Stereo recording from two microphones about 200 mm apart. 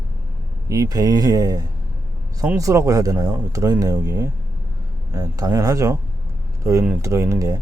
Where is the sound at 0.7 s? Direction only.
20° right (ahead or behind).